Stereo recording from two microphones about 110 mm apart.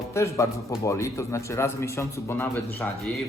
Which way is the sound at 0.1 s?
25° left (ahead or behind).